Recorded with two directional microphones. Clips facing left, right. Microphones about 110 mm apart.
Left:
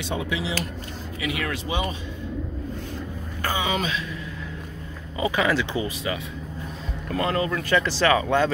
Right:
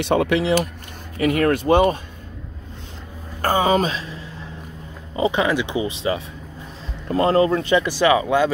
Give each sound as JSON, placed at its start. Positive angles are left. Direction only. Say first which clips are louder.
{"t": 0.0, "sound": "speech", "louder": "right 9 dB", "side_deg": -65}
{"t": 1.2, "sound": "speech", "louder": "right 11 dB", "side_deg": -45}
{"t": 3.4, "sound": "speech", "louder": "right 8 dB", "side_deg": -45}
{"t": 7.1, "sound": "speech", "louder": "right 8 dB", "side_deg": -30}
{"t": 7.7, "sound": "speech", "louder": "right 1 dB", "side_deg": -15}